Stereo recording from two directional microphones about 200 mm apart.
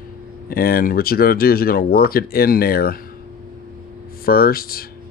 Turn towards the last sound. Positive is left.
turn(degrees=50)  # may be behind; listen again after turning